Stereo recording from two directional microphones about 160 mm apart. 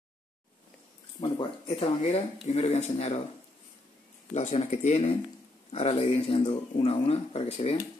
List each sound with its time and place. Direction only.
1.2 s speech: 35° left (ahead or behind)
4.3 s speech: 45° left (ahead or behind)